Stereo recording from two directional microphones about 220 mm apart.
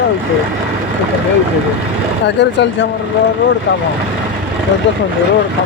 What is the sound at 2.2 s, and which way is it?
Speech, 50° left (ahead or behind).